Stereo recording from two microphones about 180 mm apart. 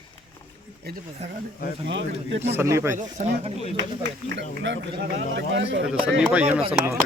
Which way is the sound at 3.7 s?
80° right.